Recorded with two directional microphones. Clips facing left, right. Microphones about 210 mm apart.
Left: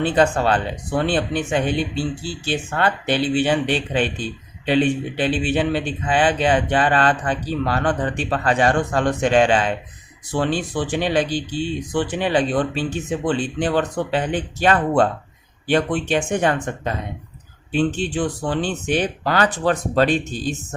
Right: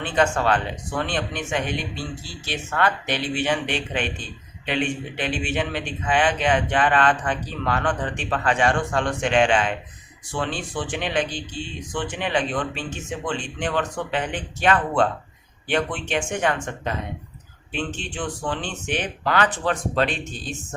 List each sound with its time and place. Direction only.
0.0 s speech: 35° left (ahead or behind)